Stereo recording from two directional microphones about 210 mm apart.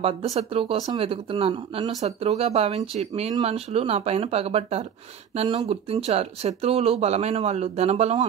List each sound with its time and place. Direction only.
0.0 s speech: 30° right (ahead or behind)